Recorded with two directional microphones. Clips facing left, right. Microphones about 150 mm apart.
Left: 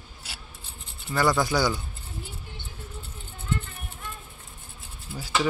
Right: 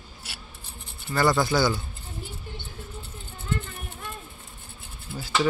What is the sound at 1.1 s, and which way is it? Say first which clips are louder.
Speech: right 1 dB; 15° left (ahead or behind).